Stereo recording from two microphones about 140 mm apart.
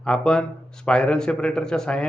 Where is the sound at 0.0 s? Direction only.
5° left (ahead or behind).